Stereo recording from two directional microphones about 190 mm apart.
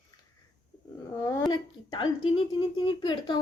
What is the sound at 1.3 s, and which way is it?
Speech, 20° left (ahead or behind).